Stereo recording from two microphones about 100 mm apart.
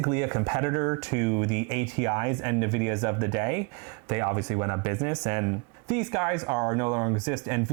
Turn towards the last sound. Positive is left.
turn(degrees=-25)  # may be behind; listen again after turning